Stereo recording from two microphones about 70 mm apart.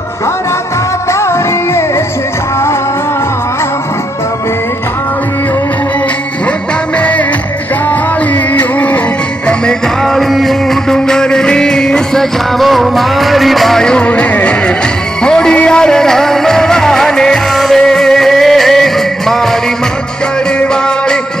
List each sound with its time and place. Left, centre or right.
1.2 s music: left
7.0 s music: centre
8.5 s music: left
10.0 s music: centre
20.5 s music: centre